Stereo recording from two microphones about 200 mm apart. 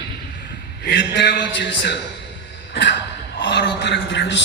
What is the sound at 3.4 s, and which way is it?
A man's voice, 60° left (ahead or behind).